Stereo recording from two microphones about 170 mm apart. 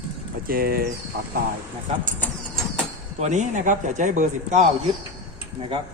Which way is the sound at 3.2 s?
45° right (ahead or behind).